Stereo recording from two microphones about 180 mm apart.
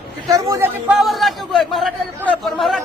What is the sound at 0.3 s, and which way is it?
Speech, 15° right (ahead or behind).